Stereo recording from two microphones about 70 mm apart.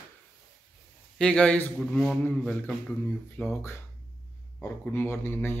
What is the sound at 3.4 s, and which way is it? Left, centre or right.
Speech, centre.